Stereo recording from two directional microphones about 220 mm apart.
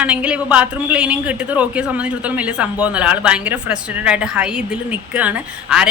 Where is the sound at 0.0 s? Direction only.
5° right (ahead or behind).